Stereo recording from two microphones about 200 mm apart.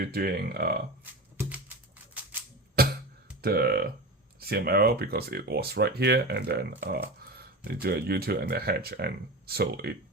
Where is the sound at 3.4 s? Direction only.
50° right (ahead or behind).